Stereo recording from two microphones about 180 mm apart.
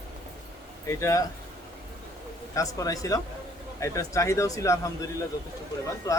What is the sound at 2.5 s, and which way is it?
Speech, 20° left (ahead or behind).